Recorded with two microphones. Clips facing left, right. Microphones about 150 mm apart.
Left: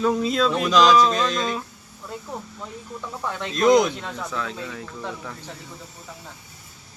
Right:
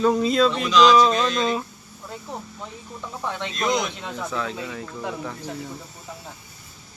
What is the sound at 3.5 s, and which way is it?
Speech, 45° left (ahead or behind).